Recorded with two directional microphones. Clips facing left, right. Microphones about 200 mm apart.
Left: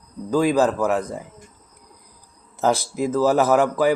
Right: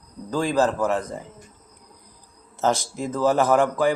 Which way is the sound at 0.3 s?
10° left (ahead or behind).